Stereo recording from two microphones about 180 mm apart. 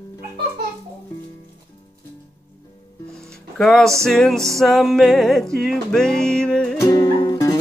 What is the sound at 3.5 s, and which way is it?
Music, centre (ahead or behind).